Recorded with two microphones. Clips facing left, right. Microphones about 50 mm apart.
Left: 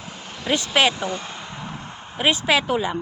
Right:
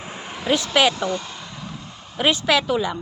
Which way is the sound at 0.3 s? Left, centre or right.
Centre.